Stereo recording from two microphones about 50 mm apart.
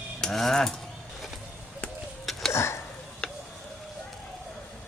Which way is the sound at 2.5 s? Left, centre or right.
Left.